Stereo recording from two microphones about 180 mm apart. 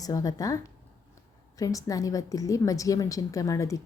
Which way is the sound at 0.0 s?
20° left (ahead or behind).